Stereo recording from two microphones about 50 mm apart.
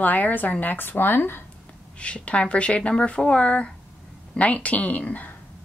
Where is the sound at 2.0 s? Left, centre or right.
Left.